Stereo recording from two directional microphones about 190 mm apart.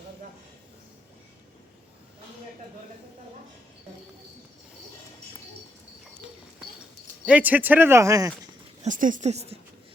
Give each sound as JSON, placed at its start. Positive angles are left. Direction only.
{"t": 7.3, "sound": "speech", "side_deg": -10}
{"t": 8.8, "sound": "speech", "side_deg": -45}